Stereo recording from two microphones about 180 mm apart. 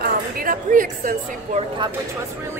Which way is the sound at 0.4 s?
50° right (ahead or behind).